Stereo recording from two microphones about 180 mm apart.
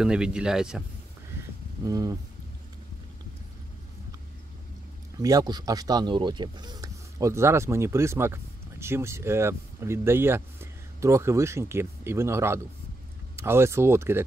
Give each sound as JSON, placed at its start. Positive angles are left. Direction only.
{"t": 0.0, "sound": "speech", "side_deg": -5}
{"t": 1.3, "sound": "music", "side_deg": -15}
{"t": 1.9, "sound": "speech", "side_deg": -20}
{"t": 5.2, "sound": "speech", "side_deg": -20}